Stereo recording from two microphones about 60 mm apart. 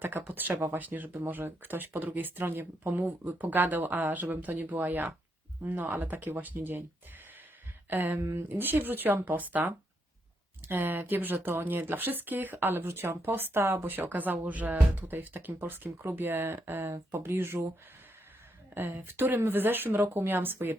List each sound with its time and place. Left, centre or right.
0.0 s speech: right
7.9 s speech: right
8.2 s speech: right
8.4 s speech: right
16.9 s speech: right
17.2 s speech: right
18.7 s speech: right